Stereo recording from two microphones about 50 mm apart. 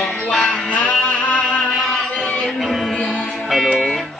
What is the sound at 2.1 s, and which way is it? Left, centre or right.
Music, centre.